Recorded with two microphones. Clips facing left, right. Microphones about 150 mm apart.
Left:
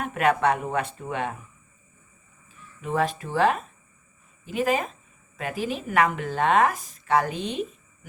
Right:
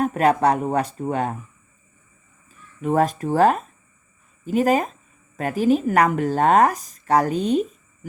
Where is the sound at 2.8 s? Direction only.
45° right (ahead or behind).